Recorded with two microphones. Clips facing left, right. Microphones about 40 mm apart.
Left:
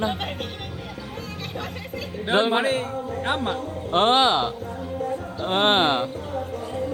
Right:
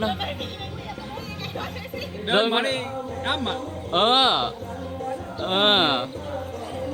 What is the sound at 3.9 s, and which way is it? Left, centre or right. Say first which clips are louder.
A man's voice: left 1 dB; right.